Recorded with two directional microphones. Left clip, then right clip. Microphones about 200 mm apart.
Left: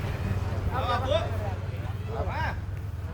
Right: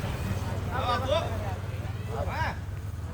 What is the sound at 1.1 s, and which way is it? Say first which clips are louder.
Vehicle: left 1 dB; 15° right (ahead or behind).